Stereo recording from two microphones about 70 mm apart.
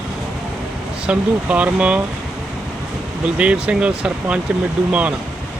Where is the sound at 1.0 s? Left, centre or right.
Centre.